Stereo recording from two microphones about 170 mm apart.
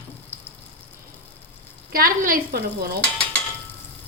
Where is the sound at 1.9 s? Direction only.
55° right (ahead or behind).